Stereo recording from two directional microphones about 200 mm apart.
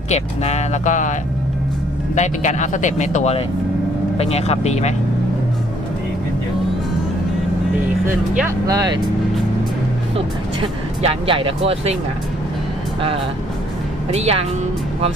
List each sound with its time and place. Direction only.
0.1 s speech: 35° left (ahead or behind)
2.1 s speech: 35° left (ahead or behind)
8.0 s speech: 10° right (ahead or behind)
10.6 s speech: 30° right (ahead or behind)
14.1 s speech: 30° right (ahead or behind)